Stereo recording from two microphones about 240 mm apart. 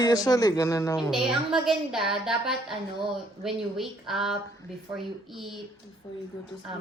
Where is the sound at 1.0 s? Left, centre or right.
Centre.